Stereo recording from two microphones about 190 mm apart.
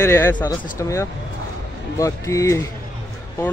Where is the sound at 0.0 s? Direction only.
10° left (ahead or behind).